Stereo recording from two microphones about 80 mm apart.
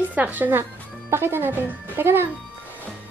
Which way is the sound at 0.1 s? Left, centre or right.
Right.